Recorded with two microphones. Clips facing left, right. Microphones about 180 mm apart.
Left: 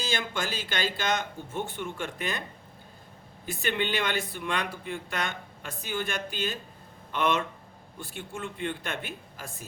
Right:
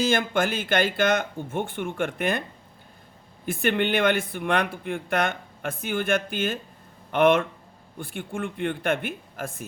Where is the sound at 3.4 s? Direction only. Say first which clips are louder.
Right 6 dB; 55° right (ahead or behind).